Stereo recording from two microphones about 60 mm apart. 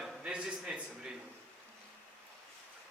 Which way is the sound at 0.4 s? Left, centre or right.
Centre.